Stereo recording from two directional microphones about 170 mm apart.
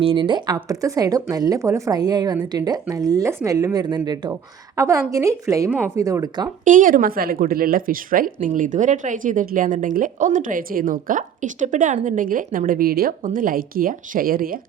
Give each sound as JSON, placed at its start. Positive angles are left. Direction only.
{"t": 0.0, "sound": "speech", "side_deg": -30}
{"t": 6.7, "sound": "speech", "side_deg": -50}